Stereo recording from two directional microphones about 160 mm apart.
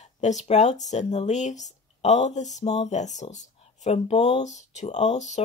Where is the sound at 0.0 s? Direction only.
45° left (ahead or behind).